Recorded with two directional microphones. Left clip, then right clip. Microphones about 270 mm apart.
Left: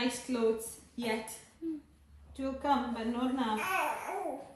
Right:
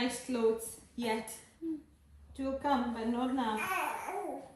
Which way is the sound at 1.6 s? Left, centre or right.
Centre.